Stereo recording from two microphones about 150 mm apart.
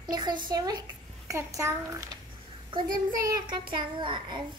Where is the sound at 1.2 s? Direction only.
20° right (ahead or behind).